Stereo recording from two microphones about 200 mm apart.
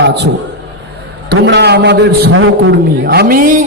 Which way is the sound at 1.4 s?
60° right (ahead or behind).